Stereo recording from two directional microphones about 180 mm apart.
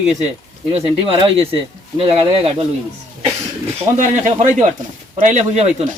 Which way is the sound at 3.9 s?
45° right (ahead or behind).